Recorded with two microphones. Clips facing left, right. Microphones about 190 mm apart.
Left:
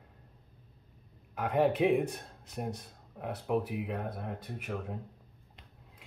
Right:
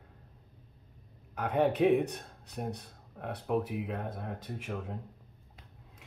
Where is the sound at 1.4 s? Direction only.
70° left (ahead or behind).